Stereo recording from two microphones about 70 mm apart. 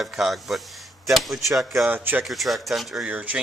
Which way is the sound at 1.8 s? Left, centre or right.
Right.